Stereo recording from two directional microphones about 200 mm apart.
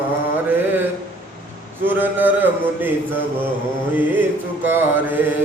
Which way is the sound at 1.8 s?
10° right (ahead or behind).